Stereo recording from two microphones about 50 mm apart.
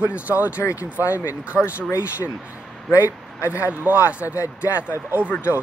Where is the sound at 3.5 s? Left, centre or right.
Right.